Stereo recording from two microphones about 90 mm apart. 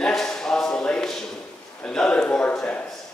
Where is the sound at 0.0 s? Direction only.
5° left (ahead or behind).